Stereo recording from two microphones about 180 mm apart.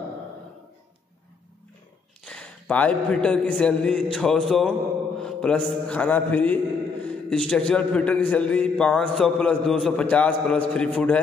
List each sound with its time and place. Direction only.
2.2 s a man's voice: 5° left (ahead or behind)
5.2 s mantra: 5° left (ahead or behind)
7.1 s a man's voice: 5° left (ahead or behind)